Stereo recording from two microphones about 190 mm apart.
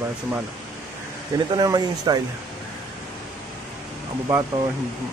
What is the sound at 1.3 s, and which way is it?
Speech, 20° right (ahead or behind).